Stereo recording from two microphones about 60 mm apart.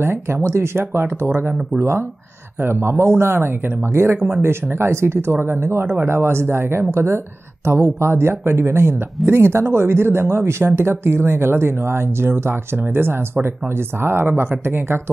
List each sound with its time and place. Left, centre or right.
0.0 s speech: right